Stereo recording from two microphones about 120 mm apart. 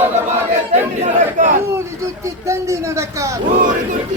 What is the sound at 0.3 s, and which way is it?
Battle cry, 85° right.